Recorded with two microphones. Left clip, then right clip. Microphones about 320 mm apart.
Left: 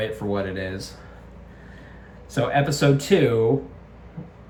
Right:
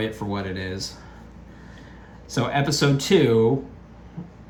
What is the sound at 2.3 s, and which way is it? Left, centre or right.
Speech, centre.